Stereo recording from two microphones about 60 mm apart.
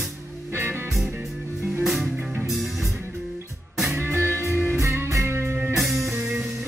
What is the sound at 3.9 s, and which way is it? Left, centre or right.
Music, right.